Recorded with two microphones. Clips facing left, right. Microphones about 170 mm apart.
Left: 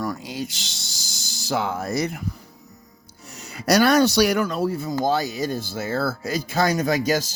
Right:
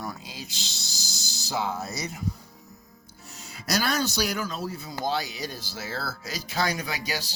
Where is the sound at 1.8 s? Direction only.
55° left (ahead or behind).